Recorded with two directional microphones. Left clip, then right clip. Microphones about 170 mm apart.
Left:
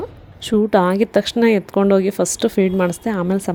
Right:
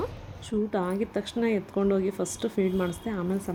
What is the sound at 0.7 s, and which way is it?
Speech, 65° left (ahead or behind).